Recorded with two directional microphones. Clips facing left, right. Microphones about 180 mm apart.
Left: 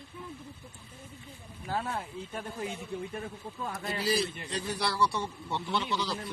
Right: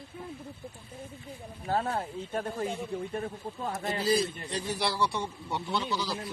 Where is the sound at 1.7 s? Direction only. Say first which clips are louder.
Right 4 dB; 40° right (ahead or behind).